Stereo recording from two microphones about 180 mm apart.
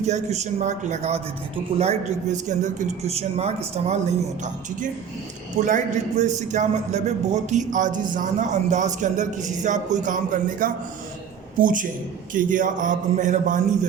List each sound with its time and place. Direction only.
0.0 s a man's voice: 40° right (ahead or behind)
5.5 s a man's voice: 45° right (ahead or behind)